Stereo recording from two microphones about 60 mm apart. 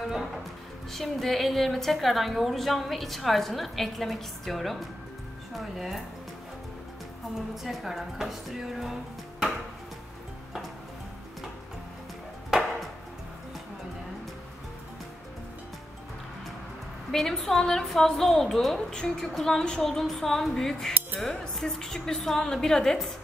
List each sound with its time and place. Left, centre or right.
0.9 s a woman's voice: centre
7.3 s a woman's voice: centre
17.1 s a woman's voice: centre